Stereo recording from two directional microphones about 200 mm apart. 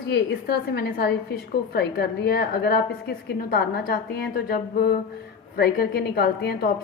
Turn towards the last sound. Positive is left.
turn(degrees=50)  # may be behind; listen again after turning